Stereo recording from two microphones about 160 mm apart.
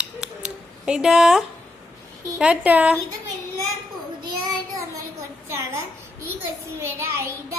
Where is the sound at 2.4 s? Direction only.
10° right (ahead or behind).